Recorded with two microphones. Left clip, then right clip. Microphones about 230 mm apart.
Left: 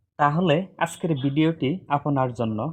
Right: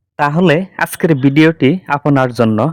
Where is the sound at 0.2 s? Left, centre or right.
Right.